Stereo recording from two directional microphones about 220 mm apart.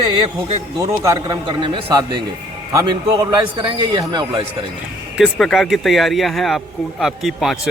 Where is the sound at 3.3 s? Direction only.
20° right (ahead or behind).